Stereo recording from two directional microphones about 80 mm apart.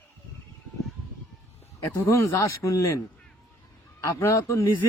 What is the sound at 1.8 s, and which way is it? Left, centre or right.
Speech, left.